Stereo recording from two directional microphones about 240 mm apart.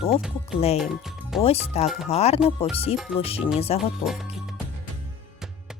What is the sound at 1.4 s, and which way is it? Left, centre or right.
Speech, left.